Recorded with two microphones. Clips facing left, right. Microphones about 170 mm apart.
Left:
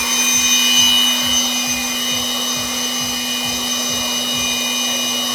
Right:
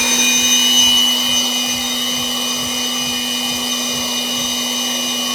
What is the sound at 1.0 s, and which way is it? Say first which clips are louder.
Vacuum cleaner: even; 10° right (ahead or behind).